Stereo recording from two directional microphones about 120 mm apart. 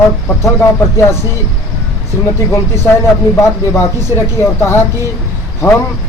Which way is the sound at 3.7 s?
20° left (ahead or behind).